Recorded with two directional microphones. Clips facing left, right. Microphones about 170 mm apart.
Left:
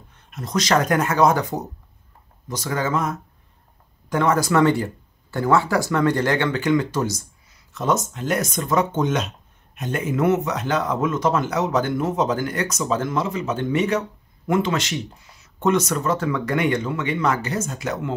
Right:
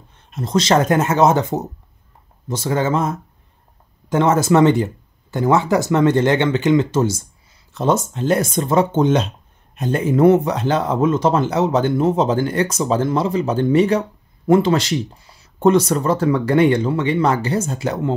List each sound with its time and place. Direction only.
0.3 s speech: 25° right (ahead or behind)